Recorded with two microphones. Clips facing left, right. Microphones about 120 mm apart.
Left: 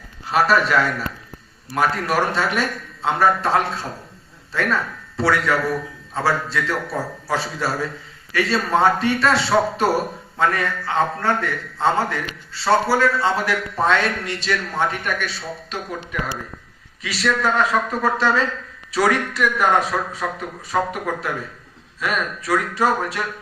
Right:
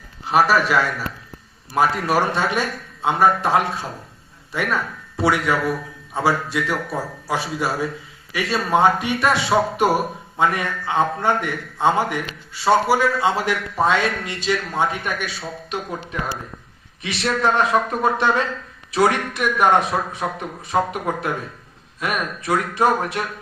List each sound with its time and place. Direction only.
0.3 s a man's voice: 10° right (ahead or behind)
2.0 s a man's voice: 15° right (ahead or behind)
17.0 s a man's voice: 25° right (ahead or behind)